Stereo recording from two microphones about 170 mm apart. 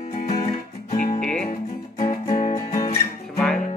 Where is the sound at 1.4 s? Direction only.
55° left (ahead or behind).